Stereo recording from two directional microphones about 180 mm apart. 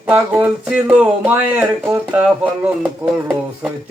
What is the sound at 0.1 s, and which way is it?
Speech, 10° right (ahead or behind).